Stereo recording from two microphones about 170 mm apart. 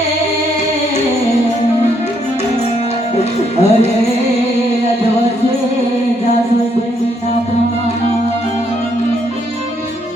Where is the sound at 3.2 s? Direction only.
40° left (ahead or behind).